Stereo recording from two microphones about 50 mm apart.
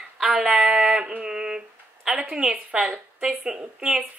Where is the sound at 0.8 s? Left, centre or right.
Centre.